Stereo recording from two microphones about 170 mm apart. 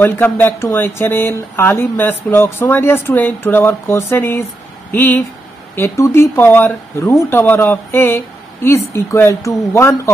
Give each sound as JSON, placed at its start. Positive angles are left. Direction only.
{"t": 0.0, "sound": "speech", "side_deg": 10}